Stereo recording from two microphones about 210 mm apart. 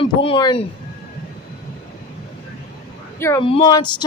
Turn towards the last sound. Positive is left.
turn(degrees=20)  # may be behind; listen again after turning